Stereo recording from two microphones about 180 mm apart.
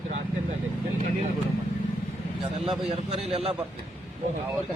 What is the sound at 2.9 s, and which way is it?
Speech, 35° right (ahead or behind).